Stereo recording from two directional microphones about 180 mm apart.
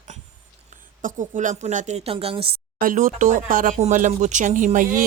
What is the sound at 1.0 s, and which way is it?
A woman's voice, 45° right (ahead or behind).